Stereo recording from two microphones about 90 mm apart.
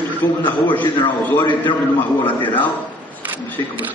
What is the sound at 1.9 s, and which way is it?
Speech, 20° left (ahead or behind).